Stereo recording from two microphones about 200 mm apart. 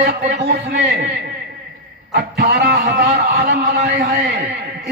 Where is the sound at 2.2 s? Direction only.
55° right (ahead or behind).